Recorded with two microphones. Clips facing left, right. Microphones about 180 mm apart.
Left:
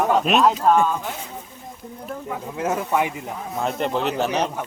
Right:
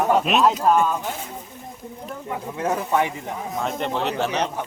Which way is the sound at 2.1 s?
5° left (ahead or behind).